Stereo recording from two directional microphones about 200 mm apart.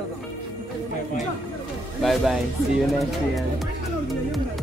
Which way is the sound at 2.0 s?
Centre (ahead or behind).